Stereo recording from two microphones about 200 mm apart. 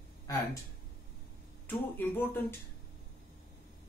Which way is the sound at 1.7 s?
10° left (ahead or behind).